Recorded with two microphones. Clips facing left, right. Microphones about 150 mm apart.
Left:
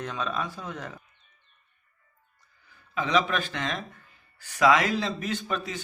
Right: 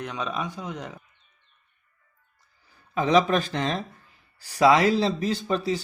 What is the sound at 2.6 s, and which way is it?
Speech, 40° right (ahead or behind).